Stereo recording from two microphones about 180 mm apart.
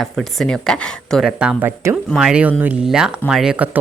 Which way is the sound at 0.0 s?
Centre (ahead or behind).